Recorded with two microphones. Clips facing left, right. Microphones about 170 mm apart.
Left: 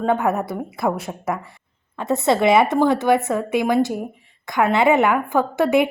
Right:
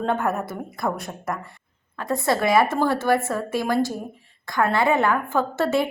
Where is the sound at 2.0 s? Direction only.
25° left (ahead or behind).